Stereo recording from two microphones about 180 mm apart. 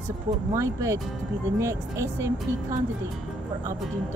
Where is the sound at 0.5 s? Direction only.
15° right (ahead or behind).